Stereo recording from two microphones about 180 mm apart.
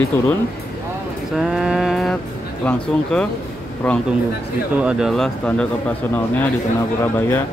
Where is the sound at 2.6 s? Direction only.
5° left (ahead or behind).